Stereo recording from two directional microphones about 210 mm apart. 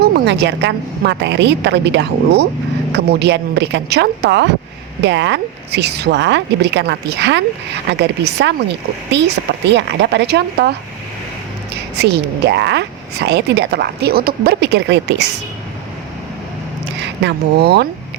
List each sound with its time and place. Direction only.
0.0 s a woman's voice: 55° right (ahead or behind)
11.9 s a woman's voice: 50° right (ahead or behind)
16.8 s speech: 55° right (ahead or behind)